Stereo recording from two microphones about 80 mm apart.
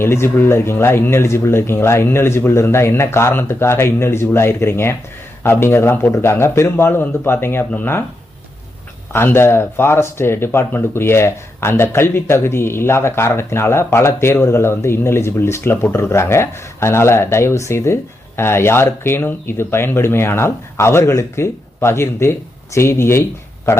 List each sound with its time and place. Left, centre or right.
0.0 s speech: left
9.1 s speech: left